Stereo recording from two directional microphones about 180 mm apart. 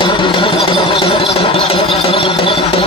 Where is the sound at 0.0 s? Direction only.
25° left (ahead or behind).